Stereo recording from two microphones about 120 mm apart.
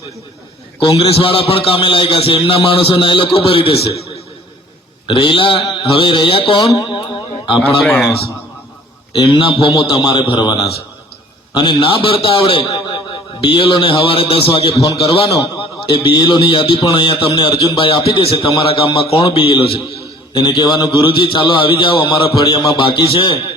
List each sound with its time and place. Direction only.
0.9 s a man's voice: 50° left (ahead or behind)
5.0 s a man's voice: 45° left (ahead or behind)
6.6 s speech: 30° left (ahead or behind)
7.8 s a man's voice: centre (ahead or behind)
9.1 s a man's voice: 40° left (ahead or behind)
11.5 s a man's voice: 45° left (ahead or behind)
14.8 s a man's voice: 30° left (ahead or behind)
15.9 s a man's voice: 45° left (ahead or behind)